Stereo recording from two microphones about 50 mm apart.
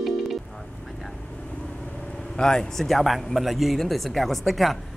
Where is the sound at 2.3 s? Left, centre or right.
Centre.